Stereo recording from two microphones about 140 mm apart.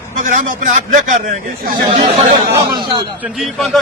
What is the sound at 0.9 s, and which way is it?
Speech, 70° right (ahead or behind).